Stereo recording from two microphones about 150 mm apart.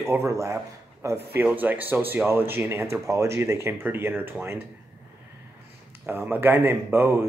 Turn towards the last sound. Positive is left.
turn(degrees=-15)  # may be behind; listen again after turning